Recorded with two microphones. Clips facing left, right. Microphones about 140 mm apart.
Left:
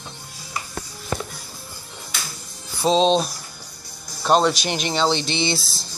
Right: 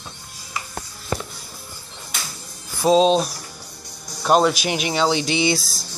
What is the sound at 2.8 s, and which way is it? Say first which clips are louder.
Speech: right 2 dB; 10° right (ahead or behind).